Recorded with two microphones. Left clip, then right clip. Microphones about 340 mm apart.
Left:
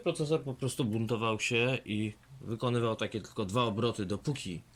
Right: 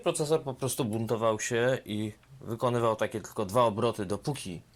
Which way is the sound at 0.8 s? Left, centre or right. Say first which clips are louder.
Right 3 dB; centre.